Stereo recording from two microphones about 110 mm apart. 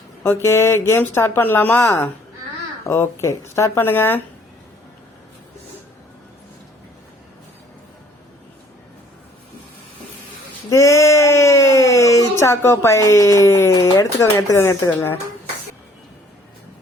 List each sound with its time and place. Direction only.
0.2 s speech: 20° left (ahead or behind)
10.7 s speech: 30° left (ahead or behind)